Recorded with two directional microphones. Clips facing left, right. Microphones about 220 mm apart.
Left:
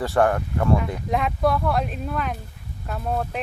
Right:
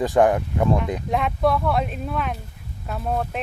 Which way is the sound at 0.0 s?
15° right (ahead or behind).